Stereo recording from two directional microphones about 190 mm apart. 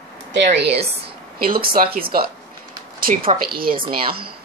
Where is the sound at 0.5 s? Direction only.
60° right (ahead or behind).